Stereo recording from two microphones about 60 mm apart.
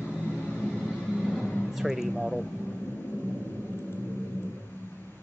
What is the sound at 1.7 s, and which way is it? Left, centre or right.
Speech, centre.